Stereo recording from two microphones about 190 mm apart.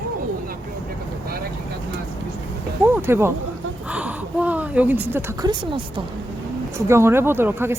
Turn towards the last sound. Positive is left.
turn(degrees=-10)  # may be behind; listen again after turning